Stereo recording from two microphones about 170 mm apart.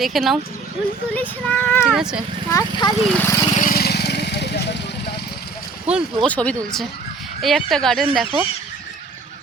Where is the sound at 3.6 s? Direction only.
65° left (ahead or behind).